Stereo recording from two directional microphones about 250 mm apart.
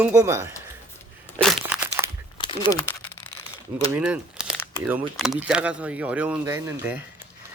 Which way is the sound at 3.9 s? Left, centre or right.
Centre.